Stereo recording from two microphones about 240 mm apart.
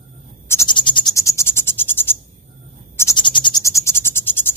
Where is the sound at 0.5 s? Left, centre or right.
Centre.